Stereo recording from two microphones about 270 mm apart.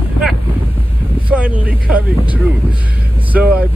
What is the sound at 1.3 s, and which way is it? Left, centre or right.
Speech, centre.